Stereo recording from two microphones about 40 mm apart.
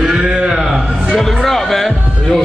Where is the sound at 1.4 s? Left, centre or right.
Centre.